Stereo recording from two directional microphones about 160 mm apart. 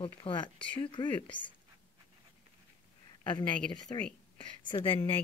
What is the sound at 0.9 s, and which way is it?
Speech, 30° left (ahead or behind).